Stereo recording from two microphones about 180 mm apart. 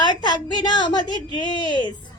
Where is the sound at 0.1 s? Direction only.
25° left (ahead or behind).